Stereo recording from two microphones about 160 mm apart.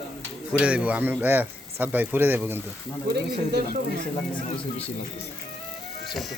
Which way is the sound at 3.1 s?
85° right.